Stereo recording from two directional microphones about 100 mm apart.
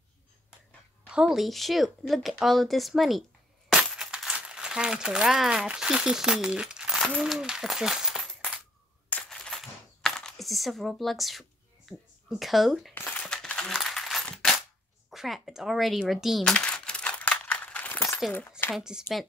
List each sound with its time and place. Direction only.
1.0 s speech: 10° right (ahead or behind)
3.7 s a sound: 5° right (ahead or behind)
7.2 s speech: 5° right (ahead or behind)
9.1 s coin: 5° left (ahead or behind)
12.9 s crumpling: 15° left (ahead or behind)
13.3 s coin: 5° left (ahead or behind)
15.0 s speech: centre (ahead or behind)
16.5 s crumpling: 10° left (ahead or behind)
18.7 s speech: 5° right (ahead or behind)